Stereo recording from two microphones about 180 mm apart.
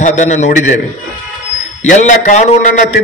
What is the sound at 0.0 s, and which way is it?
Speech, 40° left (ahead or behind).